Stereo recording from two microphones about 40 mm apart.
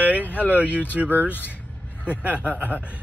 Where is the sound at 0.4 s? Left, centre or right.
Right.